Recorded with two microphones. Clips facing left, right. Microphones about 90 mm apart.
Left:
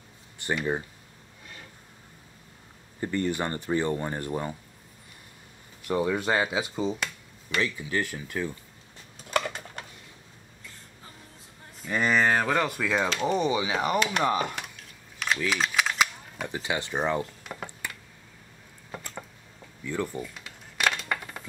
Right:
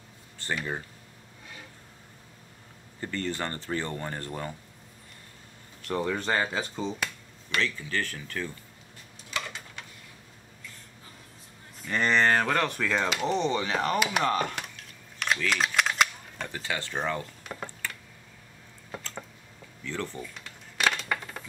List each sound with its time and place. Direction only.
0.4 s speech: 15° left (ahead or behind)
3.0 s speech: 15° left (ahead or behind)
5.9 s speech: 10° left (ahead or behind)
9.3 s a sound: 50° left (ahead or behind)
11.9 s speech: 5° left (ahead or behind)
13.9 s speech: 5° right (ahead or behind)
14.2 s camera: 10° left (ahead or behind)
15.5 s cap gun: centre (ahead or behind)
16.4 s speech: 15° left (ahead or behind)
17.4 s a sound: 5° left (ahead or behind)
19.8 s a sound: 15° left (ahead or behind)